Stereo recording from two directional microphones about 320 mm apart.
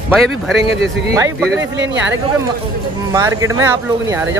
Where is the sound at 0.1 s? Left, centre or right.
Centre.